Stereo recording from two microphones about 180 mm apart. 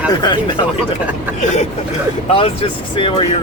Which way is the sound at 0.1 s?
25° left (ahead or behind).